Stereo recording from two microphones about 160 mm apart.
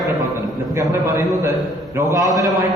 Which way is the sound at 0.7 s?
15° right (ahead or behind).